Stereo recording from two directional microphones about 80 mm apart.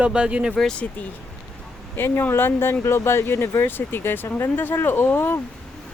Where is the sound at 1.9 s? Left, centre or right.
Left.